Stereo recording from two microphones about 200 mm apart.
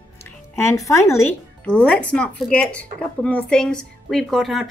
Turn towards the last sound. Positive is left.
turn(degrees=0)  # may be behind; listen again after turning